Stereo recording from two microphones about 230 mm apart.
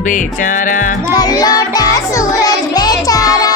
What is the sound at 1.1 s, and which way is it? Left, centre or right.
Music, centre.